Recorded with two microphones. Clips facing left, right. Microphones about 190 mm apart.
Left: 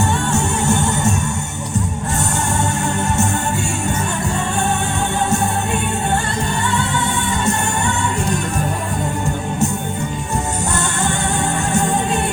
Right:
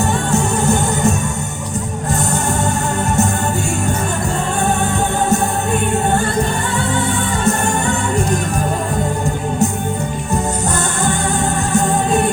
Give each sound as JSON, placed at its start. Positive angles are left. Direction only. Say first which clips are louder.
{"t": 0.0, "sound": "music", "louder": "right 2 dB", "side_deg": -35}